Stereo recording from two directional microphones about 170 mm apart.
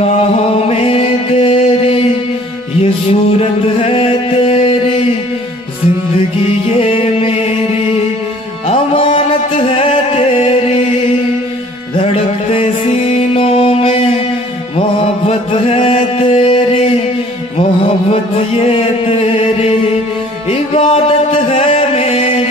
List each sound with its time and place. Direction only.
0.7 s music: 35° left (ahead or behind)
6.8 s music: 35° left (ahead or behind)
8.6 s music: 35° left (ahead or behind)
11.9 s music: 35° left (ahead or behind)
14.8 s mantra: 35° left (ahead or behind)
18.6 s chant: 35° left (ahead or behind)
20.4 s music: 35° left (ahead or behind)